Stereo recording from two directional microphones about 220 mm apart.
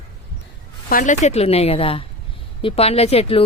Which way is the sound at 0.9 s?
35° left (ahead or behind).